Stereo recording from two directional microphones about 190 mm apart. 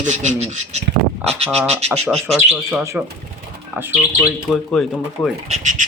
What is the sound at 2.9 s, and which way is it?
Speech, 10° right (ahead or behind).